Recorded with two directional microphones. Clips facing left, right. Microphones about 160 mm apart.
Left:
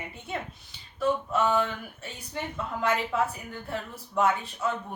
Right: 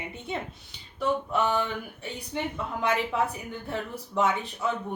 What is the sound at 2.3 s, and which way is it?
Speech, 20° right (ahead or behind).